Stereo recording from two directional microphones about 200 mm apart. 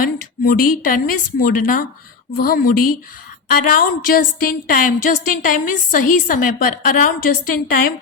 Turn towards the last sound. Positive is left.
turn(degrees=45)  # may be behind; listen again after turning